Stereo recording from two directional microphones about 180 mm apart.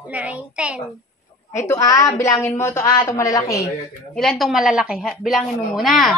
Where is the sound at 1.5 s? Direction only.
15° left (ahead or behind).